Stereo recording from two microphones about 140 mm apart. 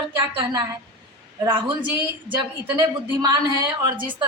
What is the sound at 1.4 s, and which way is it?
Speech, 35° right (ahead or behind).